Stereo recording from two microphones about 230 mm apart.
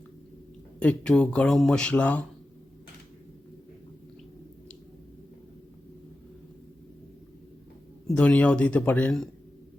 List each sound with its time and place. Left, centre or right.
0.8 s speech: centre
8.0 s speech: centre